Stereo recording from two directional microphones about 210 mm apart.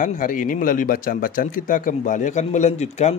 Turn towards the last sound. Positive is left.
turn(degrees=30)  # may be behind; listen again after turning